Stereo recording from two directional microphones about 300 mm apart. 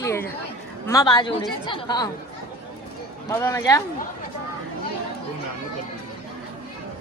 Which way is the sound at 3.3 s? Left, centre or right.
Centre.